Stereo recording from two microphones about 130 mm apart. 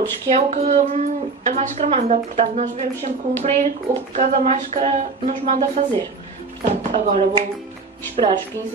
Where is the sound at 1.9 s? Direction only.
60° right (ahead or behind).